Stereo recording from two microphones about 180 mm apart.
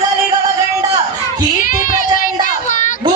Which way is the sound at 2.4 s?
45° left (ahead or behind).